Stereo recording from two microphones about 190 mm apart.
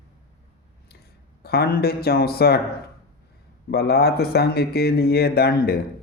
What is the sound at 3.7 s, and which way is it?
Speech, 55° left (ahead or behind).